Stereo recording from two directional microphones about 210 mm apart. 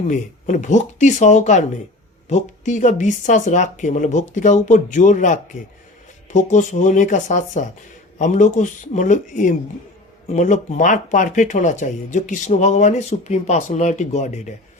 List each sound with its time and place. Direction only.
0.1 s speech: 35° left (ahead or behind)